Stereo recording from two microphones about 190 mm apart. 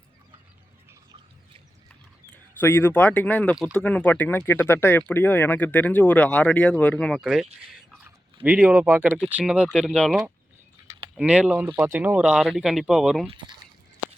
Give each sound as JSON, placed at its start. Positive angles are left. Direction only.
{"t": 2.3, "sound": "speech", "side_deg": 10}
{"t": 13.2, "sound": "speech", "side_deg": -25}